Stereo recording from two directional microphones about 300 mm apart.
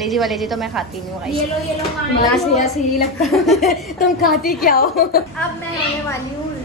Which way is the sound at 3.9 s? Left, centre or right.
Left.